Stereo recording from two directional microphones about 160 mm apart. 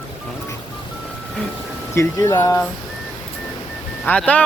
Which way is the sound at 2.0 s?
15° left (ahead or behind).